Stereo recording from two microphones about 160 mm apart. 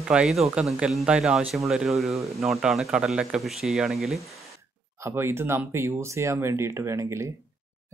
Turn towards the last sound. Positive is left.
turn(degrees=-20)  # may be behind; listen again after turning